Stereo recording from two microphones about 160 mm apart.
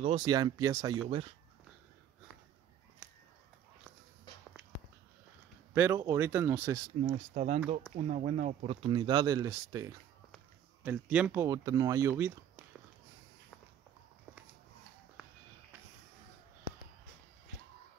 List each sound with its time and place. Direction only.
0.0 s speech: 30° right (ahead or behind)
5.8 s speech: 15° right (ahead or behind)
7.0 s speech: 40° right (ahead or behind)
8.9 s speech: 30° right (ahead or behind)
10.8 s speech: 10° right (ahead or behind)
11.4 s speech: 20° right (ahead or behind)